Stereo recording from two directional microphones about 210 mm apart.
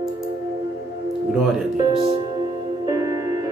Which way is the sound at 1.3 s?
Centre (ahead or behind).